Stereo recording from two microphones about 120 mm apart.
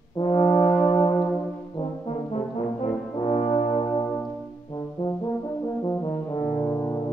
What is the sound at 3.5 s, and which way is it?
Brass instrument, 35° left (ahead or behind).